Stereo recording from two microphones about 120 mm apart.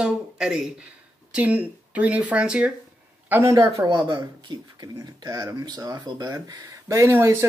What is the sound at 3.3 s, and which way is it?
Speech, 20° right (ahead or behind).